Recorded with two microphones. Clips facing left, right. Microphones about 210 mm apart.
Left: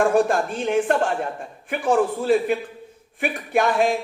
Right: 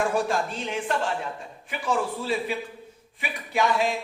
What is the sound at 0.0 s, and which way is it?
Speech, 50° left (ahead or behind).